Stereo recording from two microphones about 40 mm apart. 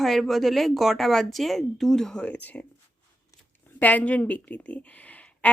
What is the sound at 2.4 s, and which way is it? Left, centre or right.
Speech, left.